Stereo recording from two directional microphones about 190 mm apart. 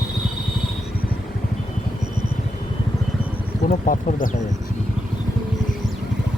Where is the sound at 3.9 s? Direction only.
45° left (ahead or behind).